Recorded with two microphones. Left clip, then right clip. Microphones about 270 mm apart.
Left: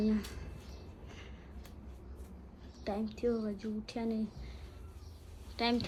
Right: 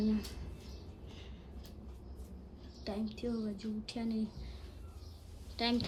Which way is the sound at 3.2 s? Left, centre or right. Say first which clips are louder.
Left 8 dB; centre.